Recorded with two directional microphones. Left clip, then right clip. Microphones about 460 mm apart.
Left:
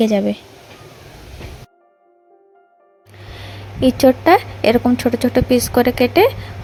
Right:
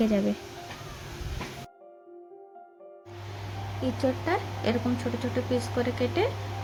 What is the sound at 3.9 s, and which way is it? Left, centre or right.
Speech, centre.